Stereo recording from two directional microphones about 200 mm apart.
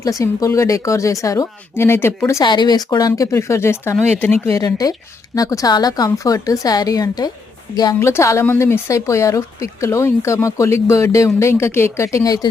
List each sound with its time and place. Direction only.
0.0 s speech: 15° left (ahead or behind)